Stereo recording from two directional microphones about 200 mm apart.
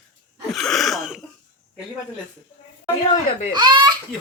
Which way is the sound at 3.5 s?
20° right (ahead or behind).